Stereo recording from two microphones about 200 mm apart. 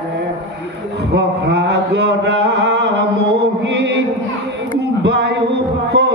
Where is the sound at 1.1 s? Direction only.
60° right (ahead or behind).